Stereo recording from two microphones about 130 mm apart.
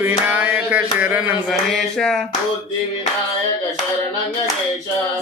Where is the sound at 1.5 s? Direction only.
5° left (ahead or behind).